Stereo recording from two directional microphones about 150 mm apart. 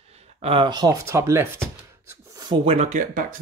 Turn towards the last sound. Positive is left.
turn(degrees=-55)  # may be behind; listen again after turning